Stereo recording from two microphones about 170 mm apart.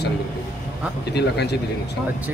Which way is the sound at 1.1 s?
80° left.